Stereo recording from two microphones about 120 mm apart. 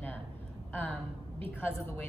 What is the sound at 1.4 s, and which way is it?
Speech, 15° left (ahead or behind).